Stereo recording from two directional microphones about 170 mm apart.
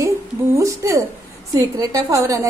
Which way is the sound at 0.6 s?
20° right (ahead or behind).